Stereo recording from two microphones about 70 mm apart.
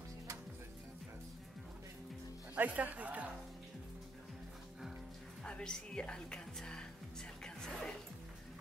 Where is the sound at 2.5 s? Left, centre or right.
Right.